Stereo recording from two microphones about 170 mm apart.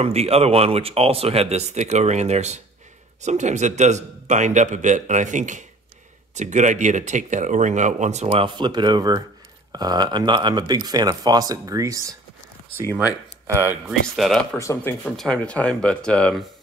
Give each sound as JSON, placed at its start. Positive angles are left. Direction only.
{"t": 0.0, "sound": "speech", "side_deg": -40}
{"t": 13.8, "sound": "speech", "side_deg": 0}
{"t": 14.6, "sound": "speech", "side_deg": 15}
{"t": 15.0, "sound": "speech", "side_deg": 5}